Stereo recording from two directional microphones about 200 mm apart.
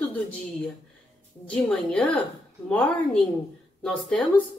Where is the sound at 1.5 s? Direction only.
5° left (ahead or behind).